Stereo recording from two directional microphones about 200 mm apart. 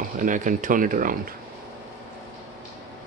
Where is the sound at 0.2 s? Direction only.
40° right (ahead or behind).